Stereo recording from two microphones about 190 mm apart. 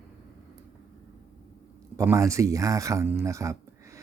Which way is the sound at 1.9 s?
15° right (ahead or behind).